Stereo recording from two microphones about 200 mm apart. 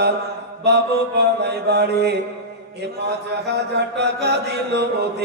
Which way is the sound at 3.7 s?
60° right (ahead or behind).